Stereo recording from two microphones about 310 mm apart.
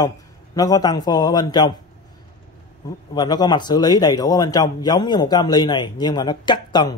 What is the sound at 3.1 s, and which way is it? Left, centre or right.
A man's voice, centre.